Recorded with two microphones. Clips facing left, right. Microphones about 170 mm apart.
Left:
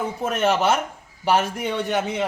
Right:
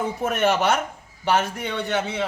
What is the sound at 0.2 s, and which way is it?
A man's voice, centre (ahead or behind).